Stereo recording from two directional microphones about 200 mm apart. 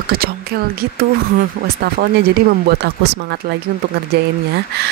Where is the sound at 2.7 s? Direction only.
55° right (ahead or behind).